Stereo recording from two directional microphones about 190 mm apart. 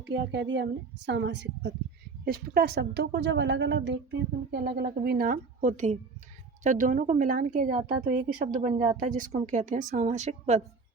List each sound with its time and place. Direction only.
0.1 s a woman's voice: 75° right (ahead or behind)
4.5 s a woman's voice: 55° right (ahead or behind); by 10.6 s 35° right (ahead or behind)